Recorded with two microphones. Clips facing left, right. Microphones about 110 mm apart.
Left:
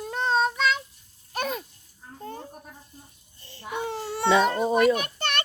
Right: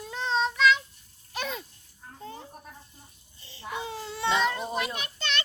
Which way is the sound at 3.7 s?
60° left (ahead or behind).